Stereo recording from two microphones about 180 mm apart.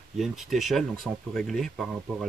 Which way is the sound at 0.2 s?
Centre (ahead or behind).